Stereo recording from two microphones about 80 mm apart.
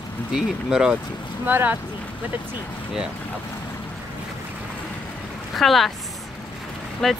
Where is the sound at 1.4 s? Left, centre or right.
Right.